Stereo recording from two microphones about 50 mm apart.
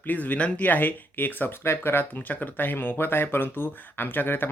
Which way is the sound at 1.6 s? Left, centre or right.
Left.